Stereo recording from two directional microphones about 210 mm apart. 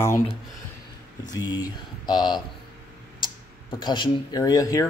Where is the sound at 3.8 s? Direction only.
20° left (ahead or behind).